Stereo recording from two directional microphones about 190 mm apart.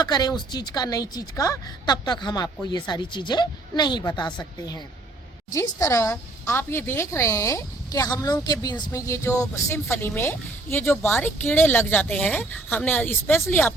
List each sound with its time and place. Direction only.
0.0 s a woman's voice: 20° left (ahead or behind)